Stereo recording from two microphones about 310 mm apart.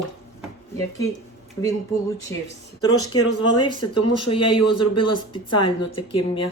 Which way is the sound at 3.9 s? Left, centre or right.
Left.